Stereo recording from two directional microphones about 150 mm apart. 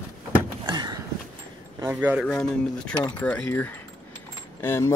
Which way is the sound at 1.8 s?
10° right (ahead or behind).